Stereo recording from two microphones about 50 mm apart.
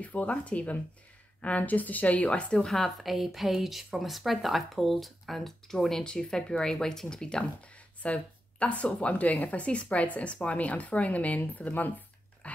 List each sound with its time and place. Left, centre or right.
0.0 s a woman's voice: left
2.5 s speech: centre
3.0 s speech: centre
8.0 s a woman's voice: left
12.4 s dog: left